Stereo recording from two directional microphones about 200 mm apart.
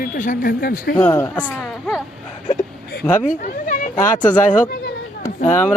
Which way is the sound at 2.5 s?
50° left (ahead or behind).